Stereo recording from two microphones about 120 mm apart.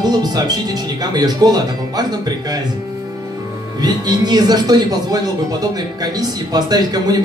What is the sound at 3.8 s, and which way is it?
Speech, 35° right (ahead or behind).